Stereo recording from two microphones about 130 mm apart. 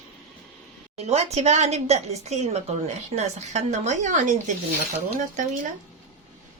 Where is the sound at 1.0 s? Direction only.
55° right (ahead or behind).